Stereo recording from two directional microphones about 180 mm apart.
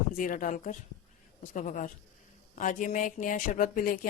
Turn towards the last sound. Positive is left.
turn(degrees=50)  # may be behind; listen again after turning